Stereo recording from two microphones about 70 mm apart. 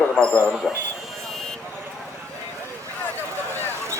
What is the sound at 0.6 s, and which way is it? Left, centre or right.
Speech, centre.